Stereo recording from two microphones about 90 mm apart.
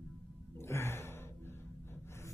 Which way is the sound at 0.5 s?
30° left (ahead or behind).